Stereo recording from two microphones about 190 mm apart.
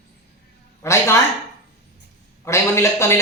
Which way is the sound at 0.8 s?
15° left (ahead or behind).